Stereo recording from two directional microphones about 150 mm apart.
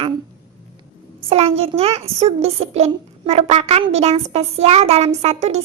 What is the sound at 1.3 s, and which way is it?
A child's voice, 40° right (ahead or behind).